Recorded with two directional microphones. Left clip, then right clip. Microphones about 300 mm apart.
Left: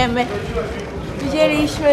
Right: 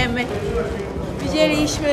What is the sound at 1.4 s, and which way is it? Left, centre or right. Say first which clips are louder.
Speech: left 2 dB; centre.